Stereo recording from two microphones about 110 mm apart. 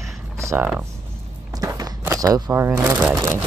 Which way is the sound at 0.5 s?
15° right (ahead or behind).